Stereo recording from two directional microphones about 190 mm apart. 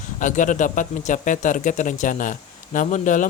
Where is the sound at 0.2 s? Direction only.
40° left (ahead or behind).